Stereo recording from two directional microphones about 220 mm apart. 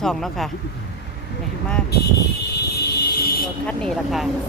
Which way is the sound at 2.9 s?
45° left (ahead or behind).